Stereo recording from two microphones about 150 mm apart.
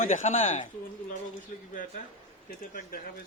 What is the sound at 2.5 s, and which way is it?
Speech, 70° left (ahead or behind).